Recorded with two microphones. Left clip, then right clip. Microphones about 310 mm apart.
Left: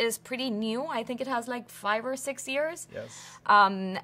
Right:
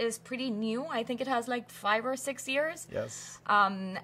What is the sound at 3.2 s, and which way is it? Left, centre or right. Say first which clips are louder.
Speech: left 6 dB; left.